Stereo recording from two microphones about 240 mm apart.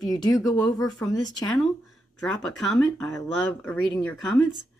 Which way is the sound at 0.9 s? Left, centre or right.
Centre.